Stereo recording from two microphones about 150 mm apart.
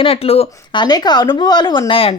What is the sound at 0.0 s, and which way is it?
Speech, 40° left (ahead or behind).